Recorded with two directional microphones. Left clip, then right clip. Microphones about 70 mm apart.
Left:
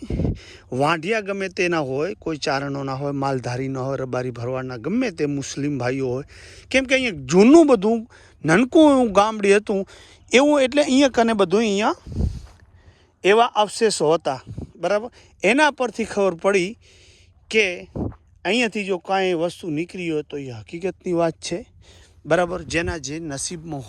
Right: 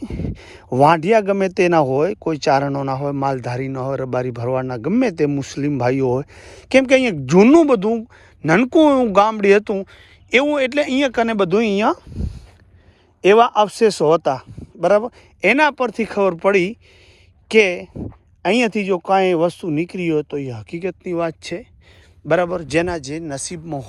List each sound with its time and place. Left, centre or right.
0.0 s speech: left
6.4 s speech: centre
7.3 s speech: left
7.5 s speech: left
8.4 s speech: left
8.7 s speech: left
9.0 s speech: left
10.2 s speech: left
11.6 s speech: left
13.2 s speech: left
15.4 s speech: left
17.5 s speech: left
21.0 s speech: left
22.3 s speech: left